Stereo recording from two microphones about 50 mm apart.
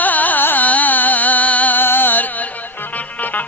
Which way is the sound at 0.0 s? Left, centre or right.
Left.